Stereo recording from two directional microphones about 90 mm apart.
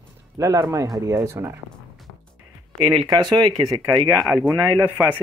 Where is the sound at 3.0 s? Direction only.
50° right (ahead or behind).